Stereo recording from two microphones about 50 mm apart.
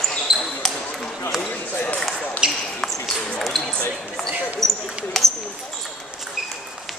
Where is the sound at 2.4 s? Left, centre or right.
Centre.